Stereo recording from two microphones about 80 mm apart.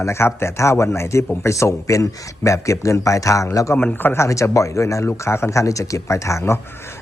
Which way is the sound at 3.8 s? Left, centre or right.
Left.